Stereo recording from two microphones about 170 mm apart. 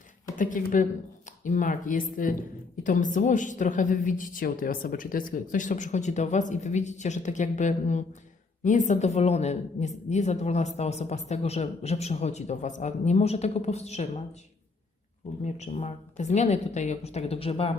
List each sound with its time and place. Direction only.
0.3 s a woman's voice: 50° left (ahead or behind)
15.4 s a woman's voice: 40° left (ahead or behind)